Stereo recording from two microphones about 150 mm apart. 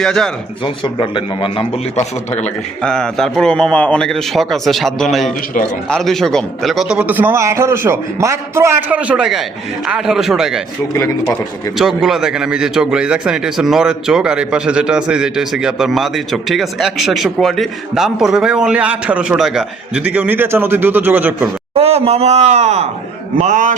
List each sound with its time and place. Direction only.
0.0 s a man's voice: centre (ahead or behind)
0.6 s a man's voice: 35° left (ahead or behind)
2.8 s a man's voice: 5° left (ahead or behind)
5.5 s a man's voice: 60° left (ahead or behind)
5.9 s a man's voice: centre (ahead or behind)
11.0 s a man's voice: 20° left (ahead or behind)
11.8 s a man's voice: 5° right (ahead or behind)
21.8 s a man's voice: 45° right (ahead or behind)